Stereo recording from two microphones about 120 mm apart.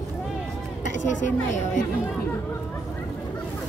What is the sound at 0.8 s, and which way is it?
A woman's voice, 90° left.